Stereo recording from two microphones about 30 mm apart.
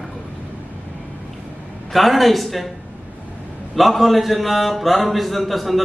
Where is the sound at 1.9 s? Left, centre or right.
Centre.